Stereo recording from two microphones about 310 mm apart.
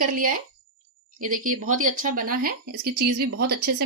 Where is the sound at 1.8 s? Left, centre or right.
Right.